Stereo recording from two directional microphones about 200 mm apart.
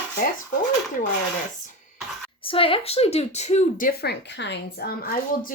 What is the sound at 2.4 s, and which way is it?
A woman's voice, 25° left (ahead or behind).